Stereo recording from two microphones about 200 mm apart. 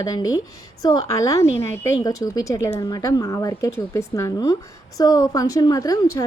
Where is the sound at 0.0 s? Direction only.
20° left (ahead or behind).